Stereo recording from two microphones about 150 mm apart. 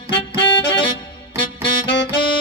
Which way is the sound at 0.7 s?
30° left (ahead or behind).